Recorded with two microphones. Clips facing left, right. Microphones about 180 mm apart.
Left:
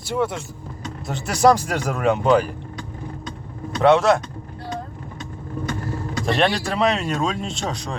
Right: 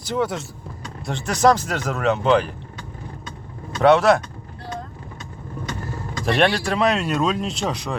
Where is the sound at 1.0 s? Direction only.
5° left (ahead or behind).